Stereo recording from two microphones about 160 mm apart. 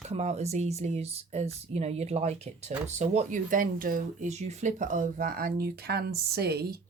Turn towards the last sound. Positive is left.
turn(degrees=-80)